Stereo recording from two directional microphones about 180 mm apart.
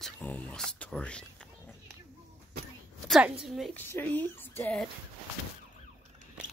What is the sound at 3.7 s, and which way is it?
Speech, 10° left (ahead or behind).